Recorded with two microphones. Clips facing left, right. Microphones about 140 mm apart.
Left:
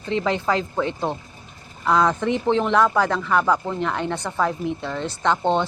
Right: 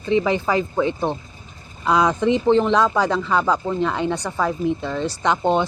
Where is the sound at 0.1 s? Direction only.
65° left (ahead or behind).